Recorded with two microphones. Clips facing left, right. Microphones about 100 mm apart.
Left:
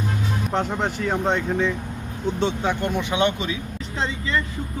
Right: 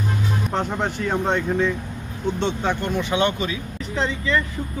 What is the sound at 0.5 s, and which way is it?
Speech, centre (ahead or behind).